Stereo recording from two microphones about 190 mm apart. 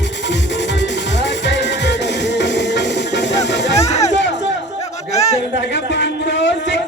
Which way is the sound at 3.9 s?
35° left (ahead or behind).